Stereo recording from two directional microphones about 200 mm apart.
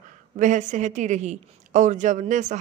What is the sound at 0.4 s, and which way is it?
A woman's voice, 40° right (ahead or behind).